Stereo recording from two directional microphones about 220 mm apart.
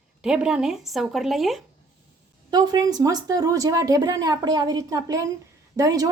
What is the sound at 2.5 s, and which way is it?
Speech, 20° right (ahead or behind).